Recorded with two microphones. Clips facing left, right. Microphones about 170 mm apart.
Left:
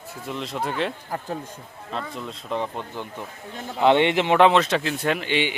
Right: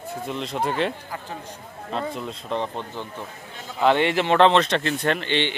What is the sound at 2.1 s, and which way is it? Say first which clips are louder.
Speech: right 1 dB; centre (ahead or behind).